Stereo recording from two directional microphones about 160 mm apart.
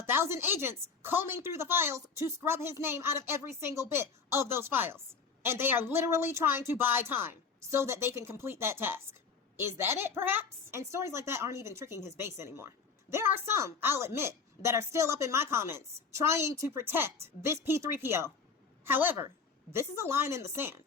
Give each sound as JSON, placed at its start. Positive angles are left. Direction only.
{"t": 0.0, "sound": "a woman's voice", "side_deg": -15}